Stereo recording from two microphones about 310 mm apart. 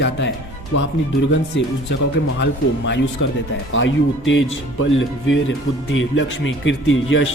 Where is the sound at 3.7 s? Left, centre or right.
Left.